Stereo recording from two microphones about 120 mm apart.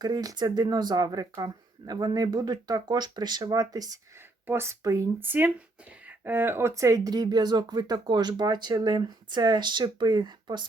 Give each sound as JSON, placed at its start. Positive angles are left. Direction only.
{"t": 0.0, "sound": "speech", "side_deg": -35}
{"t": 4.4, "sound": "speech", "side_deg": -20}